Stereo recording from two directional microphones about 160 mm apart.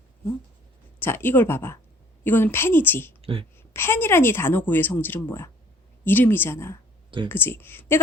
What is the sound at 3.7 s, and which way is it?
A woman's voice, 15° left (ahead or behind).